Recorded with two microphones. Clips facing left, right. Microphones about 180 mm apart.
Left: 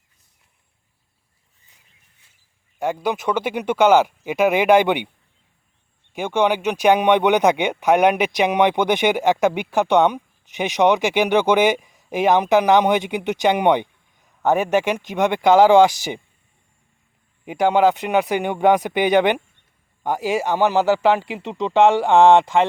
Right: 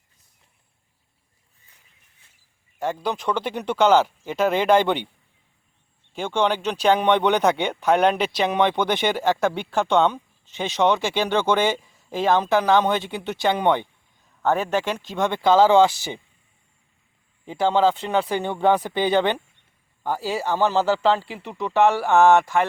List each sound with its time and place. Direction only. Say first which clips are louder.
2.7 s speech: left 3 dB; 10° left (ahead or behind)
6.1 s speech: left 3 dB; 10° left (ahead or behind)
17.4 s speech: left 3 dB; 15° left (ahead or behind)